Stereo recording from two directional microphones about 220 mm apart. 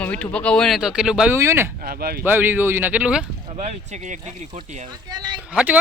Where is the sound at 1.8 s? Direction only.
45° right (ahead or behind).